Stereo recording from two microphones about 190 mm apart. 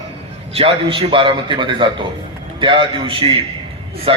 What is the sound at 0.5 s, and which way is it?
A man's voice, 30° right (ahead or behind).